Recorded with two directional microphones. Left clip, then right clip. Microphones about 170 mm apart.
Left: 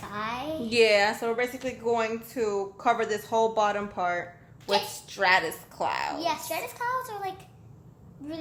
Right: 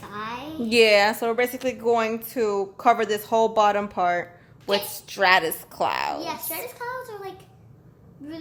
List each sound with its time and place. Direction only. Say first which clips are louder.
0.0 s a sound: even; 20° left (ahead or behind)
0.7 s a woman's voice: right 5 dB; 60° right (ahead or behind)
6.1 s a child's voice: left 2 dB; 25° left (ahead or behind)